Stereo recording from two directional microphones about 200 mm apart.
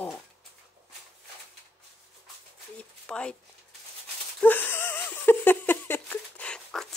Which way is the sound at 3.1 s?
5° left (ahead or behind).